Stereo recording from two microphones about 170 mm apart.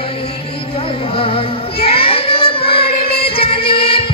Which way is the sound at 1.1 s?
35° left (ahead or behind).